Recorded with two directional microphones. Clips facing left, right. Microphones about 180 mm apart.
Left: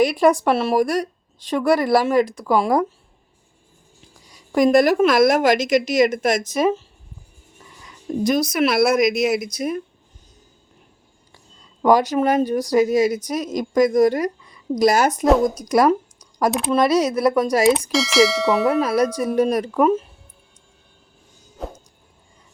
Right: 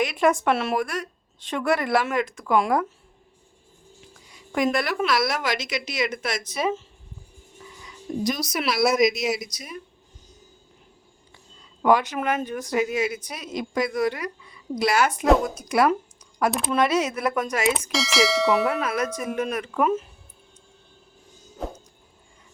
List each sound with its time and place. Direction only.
0.0 s speech: 35° left (ahead or behind)
4.3 s a woman's voice: 40° left (ahead or behind)
8.2 s speech: 55° left (ahead or behind)
11.8 s speech: 40° left (ahead or behind)
17.9 s bell: centre (ahead or behind)
18.8 s speech: 35° left (ahead or behind)
21.6 s bell: centre (ahead or behind)